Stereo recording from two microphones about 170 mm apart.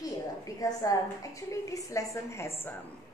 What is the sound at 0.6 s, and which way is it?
A woman's voice, 20° left (ahead or behind).